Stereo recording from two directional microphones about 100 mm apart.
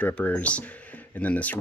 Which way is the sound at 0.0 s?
15° left (ahead or behind).